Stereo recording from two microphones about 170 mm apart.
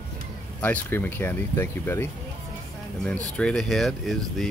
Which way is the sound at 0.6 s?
10° left (ahead or behind).